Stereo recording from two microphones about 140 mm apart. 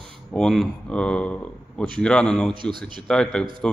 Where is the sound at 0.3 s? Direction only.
5° left (ahead or behind).